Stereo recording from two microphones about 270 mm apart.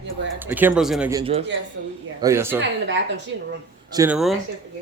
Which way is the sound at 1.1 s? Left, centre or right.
Centre.